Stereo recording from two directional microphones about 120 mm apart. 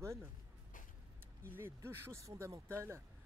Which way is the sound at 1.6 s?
20° right (ahead or behind).